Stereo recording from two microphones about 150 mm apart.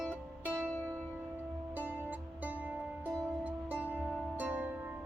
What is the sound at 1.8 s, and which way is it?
Music, 10° right (ahead or behind).